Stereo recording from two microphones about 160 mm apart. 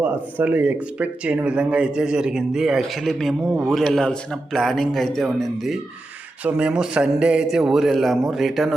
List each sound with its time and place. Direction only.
0.0 s speech: 10° right (ahead or behind)